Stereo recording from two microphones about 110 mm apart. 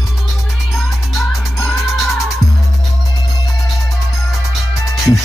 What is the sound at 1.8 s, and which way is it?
Music, centre (ahead or behind).